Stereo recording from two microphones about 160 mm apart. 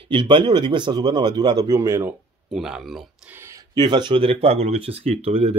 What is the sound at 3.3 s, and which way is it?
Speech, 20° right (ahead or behind).